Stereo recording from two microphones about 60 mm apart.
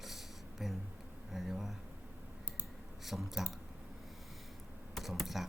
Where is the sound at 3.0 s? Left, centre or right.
Centre.